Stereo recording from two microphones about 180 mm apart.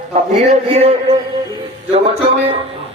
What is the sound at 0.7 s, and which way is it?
A man's voice, 35° right (ahead or behind).